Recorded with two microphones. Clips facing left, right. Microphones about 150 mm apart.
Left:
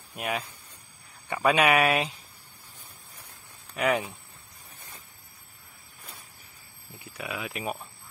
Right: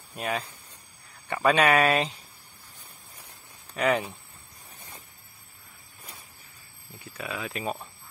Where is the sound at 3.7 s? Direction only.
10° left (ahead or behind).